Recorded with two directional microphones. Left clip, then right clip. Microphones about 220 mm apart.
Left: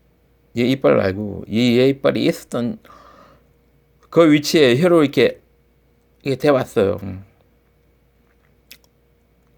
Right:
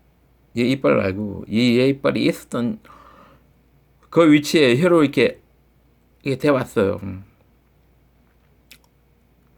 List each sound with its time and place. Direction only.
0.5 s speech: 5° left (ahead or behind)
8.7 s chewing: 5° left (ahead or behind)